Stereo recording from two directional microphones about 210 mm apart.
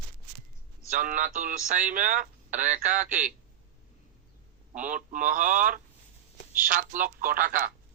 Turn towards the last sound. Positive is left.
turn(degrees=-40)  # may be behind; listen again after turning